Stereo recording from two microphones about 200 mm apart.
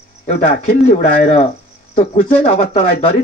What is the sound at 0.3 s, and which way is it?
Speech, 35° left (ahead or behind).